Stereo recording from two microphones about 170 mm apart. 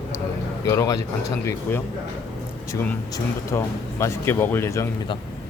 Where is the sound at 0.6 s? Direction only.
20° left (ahead or behind).